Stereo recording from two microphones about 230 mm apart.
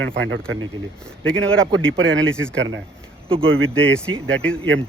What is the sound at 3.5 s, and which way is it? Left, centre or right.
Speech, right.